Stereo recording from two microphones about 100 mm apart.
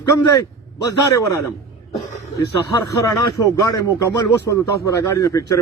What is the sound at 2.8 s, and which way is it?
Speech, 35° left (ahead or behind).